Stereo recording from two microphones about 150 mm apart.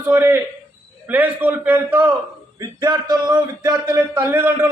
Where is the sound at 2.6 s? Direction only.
25° right (ahead or behind).